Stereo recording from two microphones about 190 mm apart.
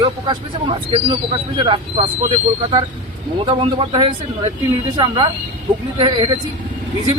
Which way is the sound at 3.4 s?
25° right (ahead or behind).